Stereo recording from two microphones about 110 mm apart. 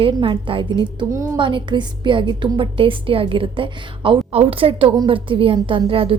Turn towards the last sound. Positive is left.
turn(degrees=-55)  # may be behind; listen again after turning